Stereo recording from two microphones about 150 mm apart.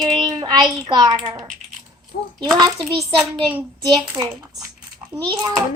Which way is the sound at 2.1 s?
70° left (ahead or behind).